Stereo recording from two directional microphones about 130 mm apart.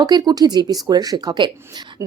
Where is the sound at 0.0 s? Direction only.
30° right (ahead or behind).